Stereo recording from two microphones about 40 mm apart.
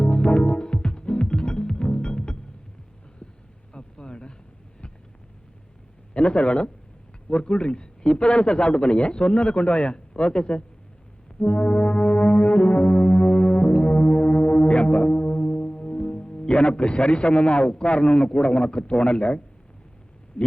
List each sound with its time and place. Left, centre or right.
0.0 s music: left
3.7 s a sound: left
6.1 s a man's voice: left
11.3 s brass instrument: left
20.4 s speech: left